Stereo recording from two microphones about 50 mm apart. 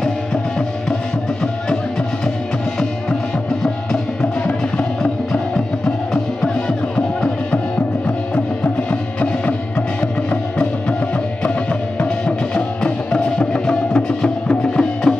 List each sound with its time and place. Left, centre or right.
0.0 s music: centre
3.6 s music: centre
9.2 s music: left
12.0 s music: left